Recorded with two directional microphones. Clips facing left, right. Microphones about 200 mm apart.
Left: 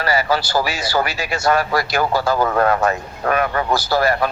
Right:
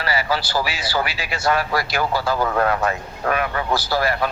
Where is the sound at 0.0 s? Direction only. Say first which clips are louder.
Left 4 dB; 45° left (ahead or behind).